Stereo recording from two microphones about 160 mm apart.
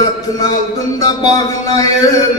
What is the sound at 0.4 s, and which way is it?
A man's voice, 25° left (ahead or behind).